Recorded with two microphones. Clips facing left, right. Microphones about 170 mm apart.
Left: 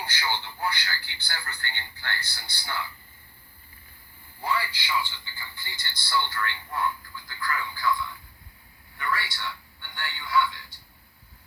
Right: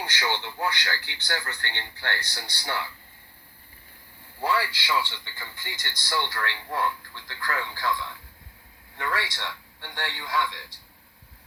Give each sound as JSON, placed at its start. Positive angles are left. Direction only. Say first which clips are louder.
{"t": 0.0, "sound": "a man's voice", "louder": "right 2 dB", "side_deg": -80}
{"t": 4.4, "sound": "a man's voice", "louder": "right 3 dB", "side_deg": -85}